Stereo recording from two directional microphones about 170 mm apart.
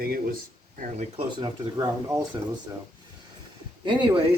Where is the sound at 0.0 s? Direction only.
60° right (ahead or behind).